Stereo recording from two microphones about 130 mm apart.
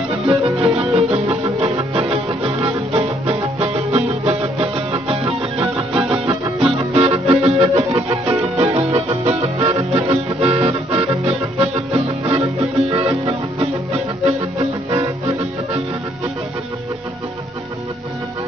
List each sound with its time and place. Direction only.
0.3 s music: 45° right (ahead or behind)